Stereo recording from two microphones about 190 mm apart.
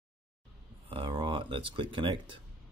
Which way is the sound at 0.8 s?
30° right (ahead or behind).